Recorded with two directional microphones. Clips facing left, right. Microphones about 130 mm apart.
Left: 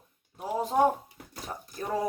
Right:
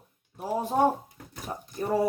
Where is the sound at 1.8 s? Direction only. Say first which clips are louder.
Right 4 dB; 10° right (ahead or behind).